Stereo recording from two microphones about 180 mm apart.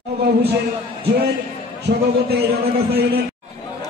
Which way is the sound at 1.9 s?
60° right (ahead or behind).